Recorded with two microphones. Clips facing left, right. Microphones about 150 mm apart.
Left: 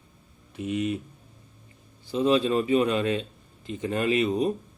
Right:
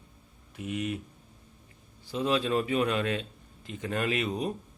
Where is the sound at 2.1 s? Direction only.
Centre (ahead or behind).